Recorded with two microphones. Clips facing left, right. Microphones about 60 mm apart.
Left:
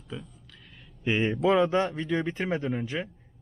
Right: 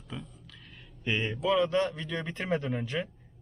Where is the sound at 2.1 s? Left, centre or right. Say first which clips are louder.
Left 3 dB; centre.